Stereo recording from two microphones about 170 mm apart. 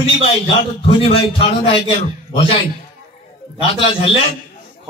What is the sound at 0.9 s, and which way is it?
A man's voice, 35° left (ahead or behind).